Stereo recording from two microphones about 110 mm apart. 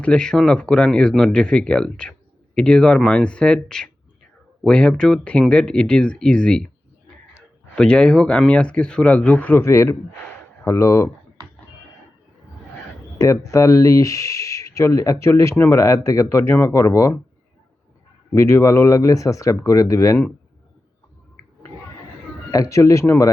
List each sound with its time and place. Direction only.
0.0 s speech: 10° left (ahead or behind)
7.8 s speech: 10° left (ahead or behind); by 11.1 s 25° left (ahead or behind)
13.1 s speech: 30° left (ahead or behind)
18.3 s speech: 25° left (ahead or behind)
22.5 s speech: 30° left (ahead or behind)